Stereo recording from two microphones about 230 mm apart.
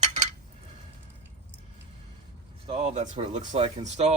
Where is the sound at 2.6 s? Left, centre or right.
Right.